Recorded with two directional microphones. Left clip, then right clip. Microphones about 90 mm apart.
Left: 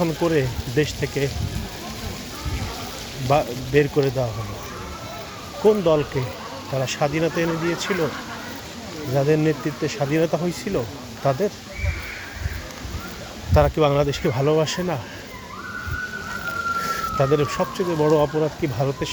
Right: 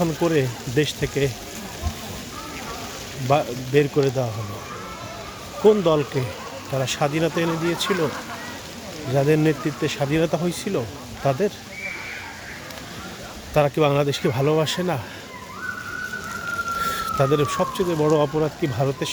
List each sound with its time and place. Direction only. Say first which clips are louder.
0.0 s speech: even; 20° right (ahead or behind)
0.3 s speech: even; 50° right (ahead or behind)
3.2 s speech: even; 30° right (ahead or behind)
5.6 s speech: right 1 dB; 55° right (ahead or behind)
9.1 s speech: even; 60° right (ahead or behind); by 11.3 s 40° right (ahead or behind)
13.5 s speech: left 1 dB; 30° right (ahead or behind)
13.7 s speech: left 1 dB; 40° right (ahead or behind)
16.8 s speech: even; 40° right (ahead or behind)
18.1 s speech: left 1 dB; 65° right (ahead or behind)
18.8 s speech: right 1 dB; 45° right (ahead or behind)